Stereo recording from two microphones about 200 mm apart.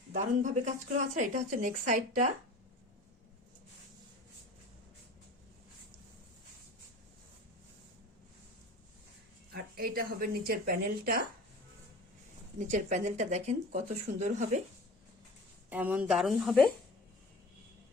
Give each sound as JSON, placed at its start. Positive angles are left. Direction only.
{"t": 0.1, "sound": "speech", "side_deg": -35}
{"t": 9.5, "sound": "speech", "side_deg": -50}
{"t": 12.5, "sound": "speech", "side_deg": -40}
{"t": 15.7, "sound": "a woman's voice", "side_deg": -10}